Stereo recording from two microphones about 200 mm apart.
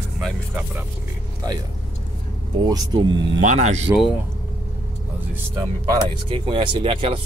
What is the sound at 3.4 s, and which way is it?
Speech, 35° right (ahead or behind).